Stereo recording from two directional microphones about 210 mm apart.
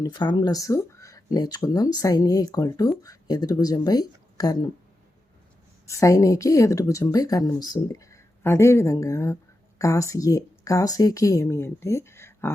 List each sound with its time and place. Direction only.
0.0 s speech: 20° left (ahead or behind)
5.8 s speech: 15° left (ahead or behind)